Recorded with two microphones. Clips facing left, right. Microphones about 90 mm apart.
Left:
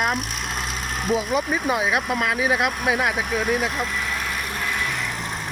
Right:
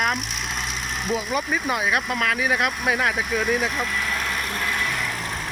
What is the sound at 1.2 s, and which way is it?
Speech, 20° left (ahead or behind).